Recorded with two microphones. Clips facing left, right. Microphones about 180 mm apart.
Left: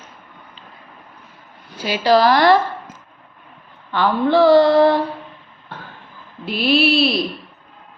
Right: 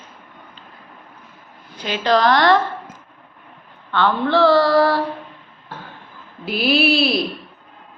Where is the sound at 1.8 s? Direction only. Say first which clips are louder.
Left 3 dB; 10° left (ahead or behind).